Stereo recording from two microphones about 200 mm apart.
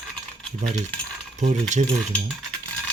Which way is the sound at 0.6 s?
35° right (ahead or behind).